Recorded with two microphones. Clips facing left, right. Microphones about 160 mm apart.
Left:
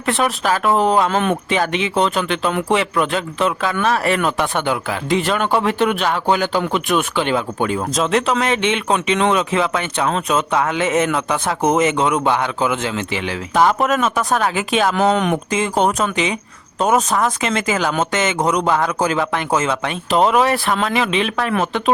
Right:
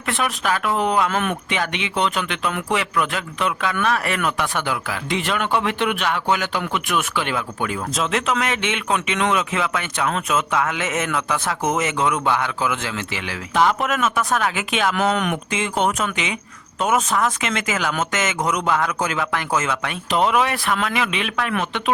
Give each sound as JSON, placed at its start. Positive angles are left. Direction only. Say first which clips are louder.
{"t": 0.1, "sound": "speech", "louder": "left 4 dB", "side_deg": 35}
{"t": 13.6, "sound": "speech", "louder": "left 3 dB", "side_deg": 40}